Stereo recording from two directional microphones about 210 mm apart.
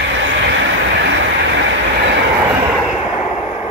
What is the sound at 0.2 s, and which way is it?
Vehicle, 60° right (ahead or behind).